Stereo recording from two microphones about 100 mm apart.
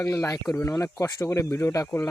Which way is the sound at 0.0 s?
35° left (ahead or behind).